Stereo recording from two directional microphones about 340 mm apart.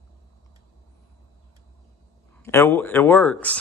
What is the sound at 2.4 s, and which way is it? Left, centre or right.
Speech, centre.